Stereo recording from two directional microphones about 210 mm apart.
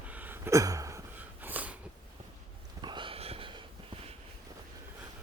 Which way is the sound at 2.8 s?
25° right (ahead or behind).